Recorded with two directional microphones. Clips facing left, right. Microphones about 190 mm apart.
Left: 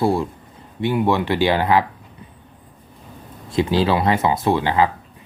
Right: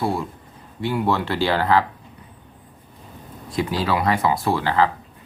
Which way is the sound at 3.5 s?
25° left (ahead or behind).